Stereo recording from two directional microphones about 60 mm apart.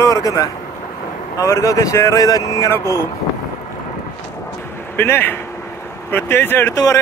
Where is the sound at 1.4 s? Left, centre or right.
Left.